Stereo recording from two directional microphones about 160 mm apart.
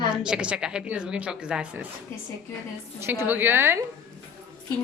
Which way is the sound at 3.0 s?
15° right (ahead or behind).